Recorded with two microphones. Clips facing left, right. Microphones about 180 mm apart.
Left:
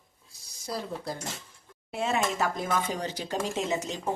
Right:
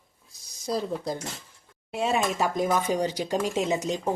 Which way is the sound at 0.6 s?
20° right (ahead or behind).